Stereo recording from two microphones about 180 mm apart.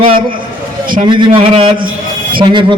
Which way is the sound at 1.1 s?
25° right (ahead or behind).